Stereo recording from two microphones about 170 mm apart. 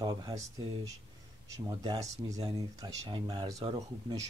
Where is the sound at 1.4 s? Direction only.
20° right (ahead or behind).